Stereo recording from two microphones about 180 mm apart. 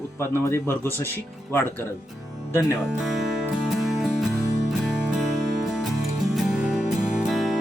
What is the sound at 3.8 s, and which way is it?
Music, centre (ahead or behind).